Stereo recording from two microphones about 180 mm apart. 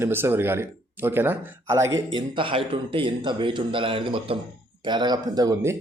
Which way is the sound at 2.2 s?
30° right (ahead or behind).